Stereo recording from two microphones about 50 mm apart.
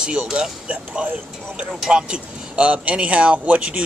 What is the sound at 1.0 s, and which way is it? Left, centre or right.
Speech, right.